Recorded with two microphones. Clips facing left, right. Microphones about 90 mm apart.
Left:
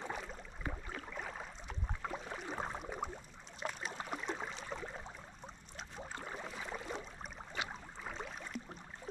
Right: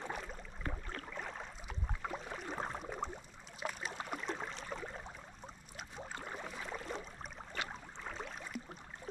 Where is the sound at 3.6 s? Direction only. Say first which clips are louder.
Even; centre (ahead or behind).